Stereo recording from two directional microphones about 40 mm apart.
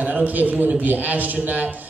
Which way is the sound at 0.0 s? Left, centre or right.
Right.